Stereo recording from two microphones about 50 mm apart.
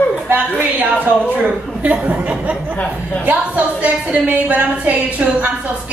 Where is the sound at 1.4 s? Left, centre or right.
Right.